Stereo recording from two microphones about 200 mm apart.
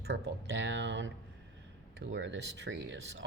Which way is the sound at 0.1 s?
60° right (ahead or behind).